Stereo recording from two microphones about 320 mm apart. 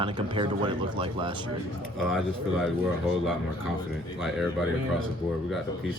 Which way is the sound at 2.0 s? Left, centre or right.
Centre.